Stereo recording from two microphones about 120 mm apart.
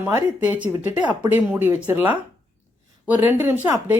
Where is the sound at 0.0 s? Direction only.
15° right (ahead or behind).